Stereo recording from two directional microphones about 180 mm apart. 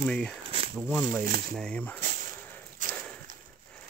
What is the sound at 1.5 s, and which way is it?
Speech, 5° left (ahead or behind).